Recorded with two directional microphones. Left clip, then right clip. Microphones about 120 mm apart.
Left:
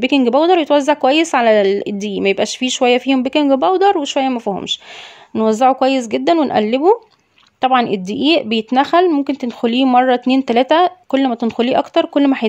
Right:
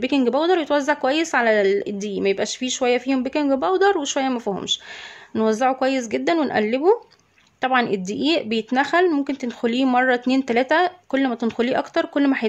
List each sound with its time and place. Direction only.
0.0 s speech: 45° left (ahead or behind)